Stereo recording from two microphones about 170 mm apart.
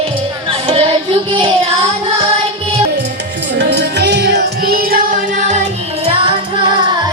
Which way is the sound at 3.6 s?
85° right.